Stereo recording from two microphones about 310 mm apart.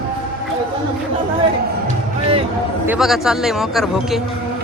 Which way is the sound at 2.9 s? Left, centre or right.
Centre.